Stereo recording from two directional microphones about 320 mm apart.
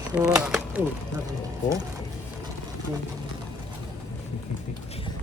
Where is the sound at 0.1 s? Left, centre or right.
Centre.